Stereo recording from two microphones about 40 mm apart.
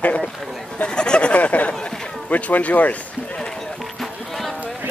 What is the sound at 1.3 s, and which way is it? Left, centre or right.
Speech, left.